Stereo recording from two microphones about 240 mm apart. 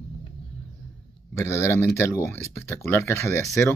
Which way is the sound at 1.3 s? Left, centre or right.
Centre.